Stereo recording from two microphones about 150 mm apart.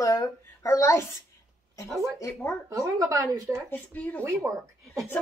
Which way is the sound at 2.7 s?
25° right (ahead or behind).